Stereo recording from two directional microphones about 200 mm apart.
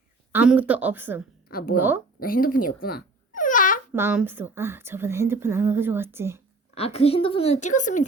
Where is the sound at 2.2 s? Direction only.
45° left (ahead or behind).